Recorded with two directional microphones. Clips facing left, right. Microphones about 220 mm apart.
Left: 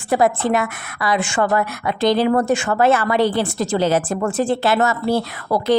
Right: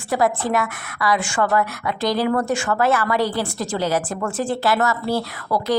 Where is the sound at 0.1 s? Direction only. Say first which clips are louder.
Left 3 dB; 25° left (ahead or behind).